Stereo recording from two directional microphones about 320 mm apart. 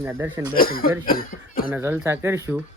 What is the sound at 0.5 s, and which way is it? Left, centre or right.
Speech, left.